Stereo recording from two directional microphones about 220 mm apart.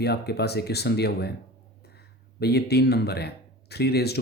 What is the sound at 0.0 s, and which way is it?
Speech, 45° left (ahead or behind).